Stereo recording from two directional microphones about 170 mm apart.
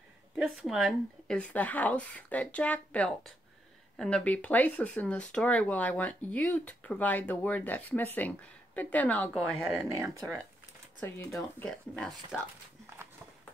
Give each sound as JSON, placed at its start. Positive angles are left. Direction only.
{"t": 0.4, "sound": "speech", "side_deg": 0}
{"t": 9.9, "sound": "speech", "side_deg": -15}
{"t": 11.0, "sound": "speech", "side_deg": 15}
{"t": 11.6, "sound": "speech", "side_deg": 5}